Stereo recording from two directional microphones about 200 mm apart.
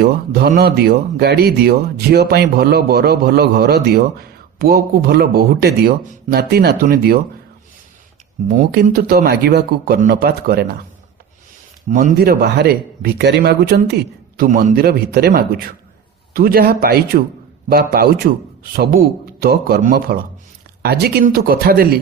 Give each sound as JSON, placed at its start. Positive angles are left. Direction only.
{"t": 0.0, "sound": "speech", "side_deg": -50}
{"t": 8.5, "sound": "speech", "side_deg": -45}
{"t": 11.9, "sound": "speech", "side_deg": -45}